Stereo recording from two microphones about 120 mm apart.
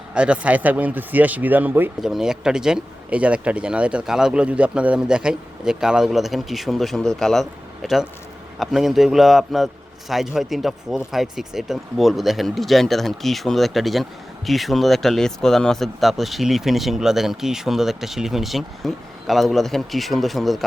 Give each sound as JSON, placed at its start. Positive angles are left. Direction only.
{"t": 0.1, "sound": "speech", "side_deg": -10}
{"t": 2.0, "sound": "speech", "side_deg": -5}